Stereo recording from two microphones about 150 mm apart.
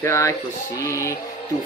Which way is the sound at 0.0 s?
20° left (ahead or behind).